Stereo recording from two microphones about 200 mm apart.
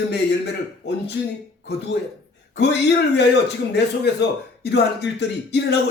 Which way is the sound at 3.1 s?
55° left (ahead or behind).